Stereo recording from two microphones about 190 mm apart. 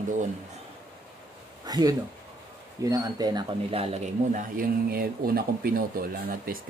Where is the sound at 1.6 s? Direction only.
20° right (ahead or behind).